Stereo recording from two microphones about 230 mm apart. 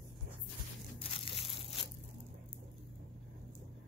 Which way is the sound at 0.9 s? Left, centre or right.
Left.